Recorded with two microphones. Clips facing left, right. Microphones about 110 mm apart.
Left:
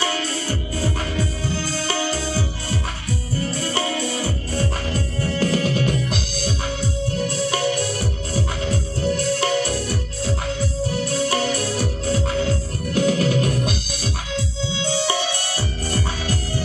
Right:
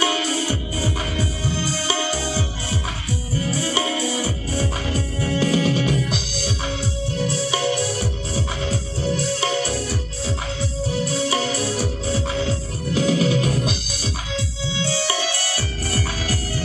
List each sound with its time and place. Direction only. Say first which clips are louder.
0.0 s music: right 3 dB; 10° right (ahead or behind)
14.8 s music: left 1 dB; 25° left (ahead or behind)